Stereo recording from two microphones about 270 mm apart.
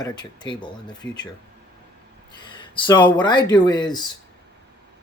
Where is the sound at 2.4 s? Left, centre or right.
Centre.